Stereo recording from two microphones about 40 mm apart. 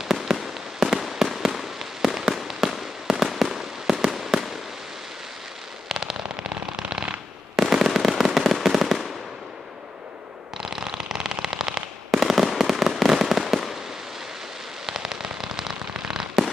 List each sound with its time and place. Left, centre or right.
0.0 s fireworks: centre
5.9 s firecracker: centre
6.8 s shuffling cards: centre
7.5 s fireworks: centre
10.6 s fireworks: centre
14.9 s rain on surface: centre
15.9 s fireworks: centre